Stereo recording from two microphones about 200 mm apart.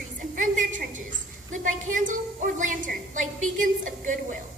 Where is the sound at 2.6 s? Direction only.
40° right (ahead or behind).